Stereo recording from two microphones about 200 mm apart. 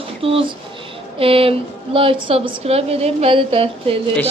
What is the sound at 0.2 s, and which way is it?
Speech, 25° right (ahead or behind).